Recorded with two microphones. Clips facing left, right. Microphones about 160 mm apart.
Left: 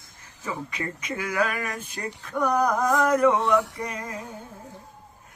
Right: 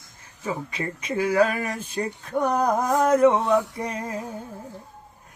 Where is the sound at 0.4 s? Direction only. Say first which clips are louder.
Right 3 dB; 30° right (ahead or behind).